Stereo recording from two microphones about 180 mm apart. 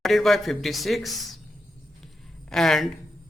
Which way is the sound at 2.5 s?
Centre (ahead or behind).